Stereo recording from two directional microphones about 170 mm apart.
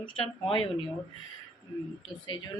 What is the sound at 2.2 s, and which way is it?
Speech, 25° left (ahead or behind).